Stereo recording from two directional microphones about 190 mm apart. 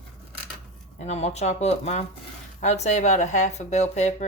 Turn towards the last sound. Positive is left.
turn(degrees=35)  # may be behind; listen again after turning